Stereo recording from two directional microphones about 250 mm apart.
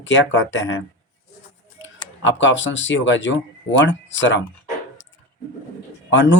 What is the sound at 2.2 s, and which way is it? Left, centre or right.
Speech, left.